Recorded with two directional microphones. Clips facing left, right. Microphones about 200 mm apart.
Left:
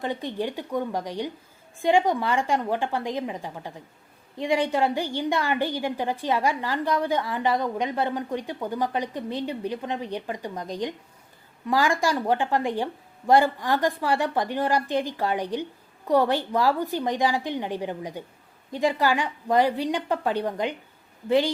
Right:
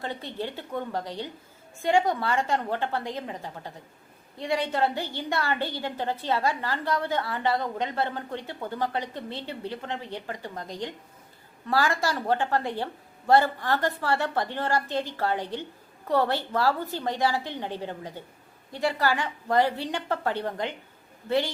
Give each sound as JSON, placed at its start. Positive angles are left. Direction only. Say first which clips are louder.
{"t": 0.0, "sound": "a woman's voice", "louder": "left 5 dB", "side_deg": 15}